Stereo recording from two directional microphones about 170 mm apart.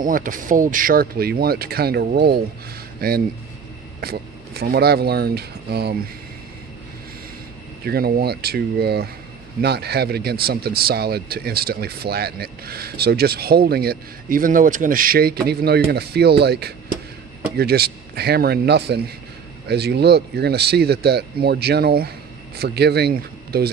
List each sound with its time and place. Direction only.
0.0 s speech: 55° right (ahead or behind); by 5.9 s 70° right (ahead or behind)
7.8 s speech: 65° right (ahead or behind)